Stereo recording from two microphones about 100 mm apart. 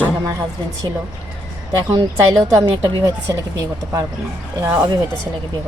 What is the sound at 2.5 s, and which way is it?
Speech, 35° right (ahead or behind).